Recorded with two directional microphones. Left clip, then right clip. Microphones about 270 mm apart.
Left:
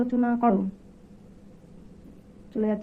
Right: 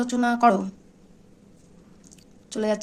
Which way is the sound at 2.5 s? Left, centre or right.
Centre.